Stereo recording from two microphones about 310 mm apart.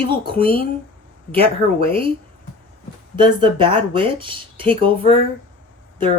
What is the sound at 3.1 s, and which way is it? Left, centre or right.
Speech, centre.